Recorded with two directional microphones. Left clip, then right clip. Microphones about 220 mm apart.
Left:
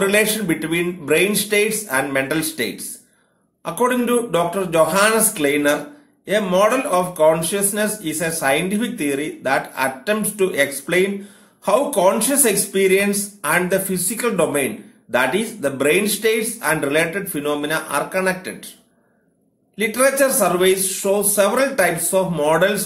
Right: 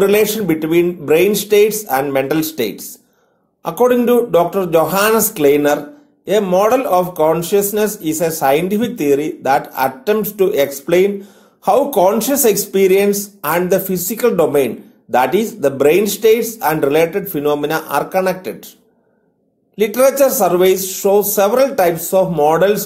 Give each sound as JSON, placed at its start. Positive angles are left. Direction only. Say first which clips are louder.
{"t": 0.0, "sound": "speech", "louder": "right 4 dB", "side_deg": -30}
{"t": 3.8, "sound": "speech", "louder": "right 6 dB", "side_deg": -30}
{"t": 19.8, "sound": "speech", "louder": "right 5 dB", "side_deg": -30}